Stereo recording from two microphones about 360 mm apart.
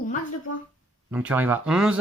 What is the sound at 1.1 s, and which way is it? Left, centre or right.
Speech, centre.